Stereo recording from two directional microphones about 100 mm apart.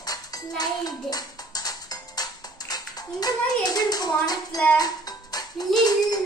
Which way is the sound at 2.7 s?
40° left (ahead or behind).